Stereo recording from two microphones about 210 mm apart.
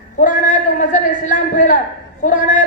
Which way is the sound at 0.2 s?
35° left (ahead or behind).